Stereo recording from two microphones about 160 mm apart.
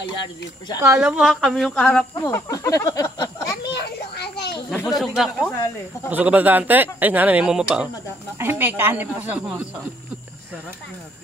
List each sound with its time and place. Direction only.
0.7 s speech: 15° right (ahead or behind)
1.0 s speech: centre (ahead or behind)
2.2 s a sound: 15° left (ahead or behind)
3.6 s children playing: 90° left
4.8 s speech: centre (ahead or behind)